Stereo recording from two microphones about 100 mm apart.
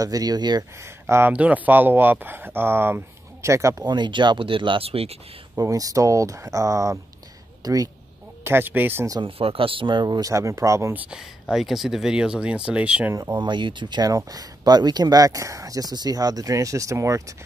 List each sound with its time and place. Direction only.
0.0 s speech: 40° right (ahead or behind)
0.8 s speech: 25° right (ahead or behind)
1.3 s speech: 15° right (ahead or behind); by 3.8 s 30° right (ahead or behind)
3.8 s speech: 50° right (ahead or behind); by 5.1 s 80° right
5.6 s speech: 35° right (ahead or behind)
8.5 s speech: 20° right (ahead or behind)
9.2 s speech: 65° right (ahead or behind); by 11.0 s 30° right (ahead or behind)
11.5 s speech: 5° right (ahead or behind)
13.1 s speech: 40° right (ahead or behind)